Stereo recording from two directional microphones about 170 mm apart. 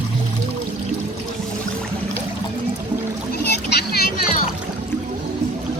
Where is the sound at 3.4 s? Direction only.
70° left (ahead or behind).